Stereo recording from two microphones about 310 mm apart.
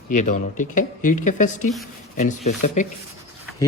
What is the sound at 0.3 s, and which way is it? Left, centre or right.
Speech, left.